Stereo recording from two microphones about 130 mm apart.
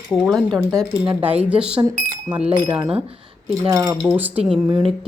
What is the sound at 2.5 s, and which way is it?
Speech, 35° right (ahead or behind).